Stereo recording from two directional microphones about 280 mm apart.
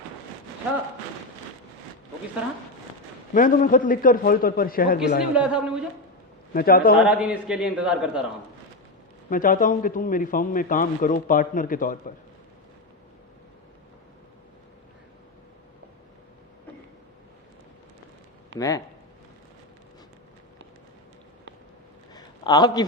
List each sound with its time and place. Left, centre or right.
3.3 s a man's voice: left
5.3 s a man's voice: centre
6.5 s a man's voice: left
7.0 s a man's voice: centre
9.3 s a man's voice: left
18.5 s speech: right
22.1 s a sound: centre